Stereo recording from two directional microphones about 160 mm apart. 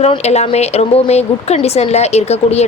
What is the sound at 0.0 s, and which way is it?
A woman's voice, 40° left (ahead or behind).